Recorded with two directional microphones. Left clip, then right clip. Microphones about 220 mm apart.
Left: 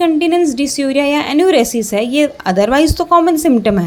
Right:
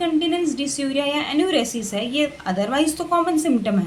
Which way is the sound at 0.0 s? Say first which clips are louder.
Left 9 dB; 35° left (ahead or behind).